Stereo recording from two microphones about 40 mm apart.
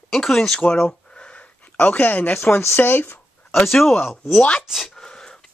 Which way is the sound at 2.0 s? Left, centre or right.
Left.